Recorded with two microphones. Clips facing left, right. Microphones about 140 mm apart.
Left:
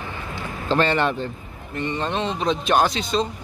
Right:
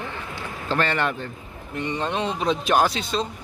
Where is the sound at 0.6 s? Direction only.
25° left (ahead or behind).